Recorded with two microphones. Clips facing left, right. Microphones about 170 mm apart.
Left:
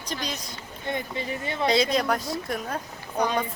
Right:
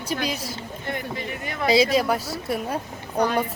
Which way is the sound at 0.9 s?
25° left (ahead or behind).